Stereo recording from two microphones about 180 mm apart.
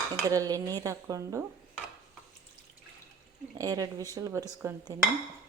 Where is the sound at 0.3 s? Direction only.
20° right (ahead or behind).